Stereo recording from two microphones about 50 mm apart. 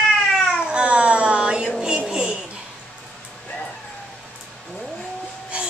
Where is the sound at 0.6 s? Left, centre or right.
Right.